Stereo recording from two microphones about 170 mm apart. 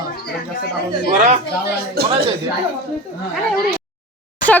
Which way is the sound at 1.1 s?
45° right (ahead or behind).